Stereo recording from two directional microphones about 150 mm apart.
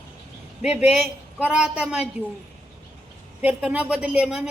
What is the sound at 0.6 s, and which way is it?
A woman's voice, 5° right (ahead or behind).